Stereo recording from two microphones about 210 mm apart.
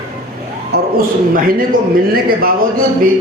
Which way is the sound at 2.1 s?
45° right (ahead or behind).